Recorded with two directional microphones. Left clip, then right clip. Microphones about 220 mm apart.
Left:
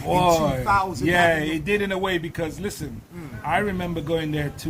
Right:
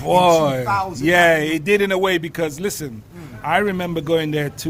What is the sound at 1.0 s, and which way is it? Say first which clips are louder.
A man's voice: right 7 dB; 55° right (ahead or behind).